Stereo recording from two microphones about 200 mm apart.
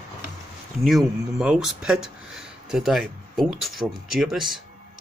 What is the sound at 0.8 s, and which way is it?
Speech, 5° right (ahead or behind).